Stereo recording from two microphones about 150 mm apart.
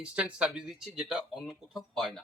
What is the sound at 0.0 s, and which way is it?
Speech, 5° right (ahead or behind).